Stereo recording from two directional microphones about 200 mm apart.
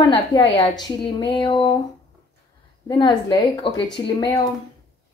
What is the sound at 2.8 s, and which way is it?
A woman's voice, 20° left (ahead or behind).